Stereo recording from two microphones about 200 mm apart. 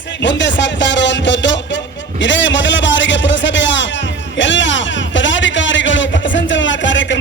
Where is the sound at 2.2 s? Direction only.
65° left (ahead or behind).